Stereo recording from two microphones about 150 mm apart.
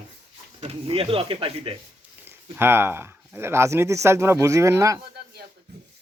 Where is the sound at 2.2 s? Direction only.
15° right (ahead or behind).